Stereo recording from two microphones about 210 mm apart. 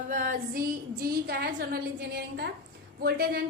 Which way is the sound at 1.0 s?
45° right (ahead or behind).